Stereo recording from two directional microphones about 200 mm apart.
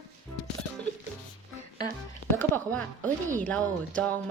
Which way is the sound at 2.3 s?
10° left (ahead or behind).